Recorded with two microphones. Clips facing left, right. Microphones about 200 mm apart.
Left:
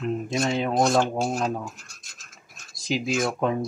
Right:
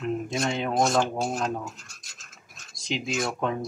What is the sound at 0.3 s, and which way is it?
Speech, centre (ahead or behind).